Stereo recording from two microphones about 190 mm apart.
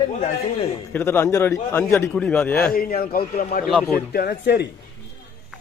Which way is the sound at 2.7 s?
50° left (ahead or behind).